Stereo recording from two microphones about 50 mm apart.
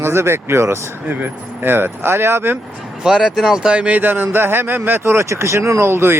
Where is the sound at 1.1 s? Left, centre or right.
Right.